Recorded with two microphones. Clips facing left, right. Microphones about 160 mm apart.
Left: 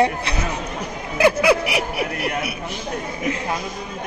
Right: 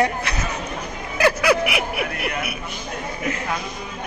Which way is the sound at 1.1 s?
25° left (ahead or behind).